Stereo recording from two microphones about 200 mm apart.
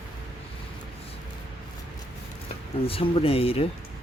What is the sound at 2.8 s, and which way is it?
Speech, 30° left (ahead or behind).